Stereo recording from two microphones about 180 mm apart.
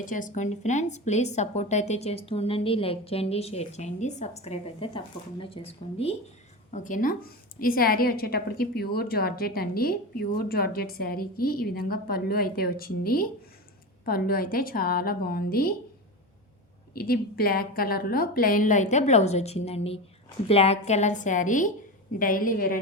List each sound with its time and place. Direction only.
0.0 s a woman's voice: 45° left (ahead or behind)
16.9 s a woman's voice: 55° left (ahead or behind)